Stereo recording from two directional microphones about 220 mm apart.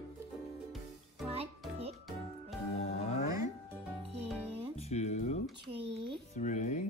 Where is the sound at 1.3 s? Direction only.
25° right (ahead or behind).